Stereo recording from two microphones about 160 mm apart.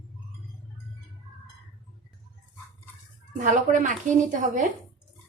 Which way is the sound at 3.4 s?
50° right (ahead or behind).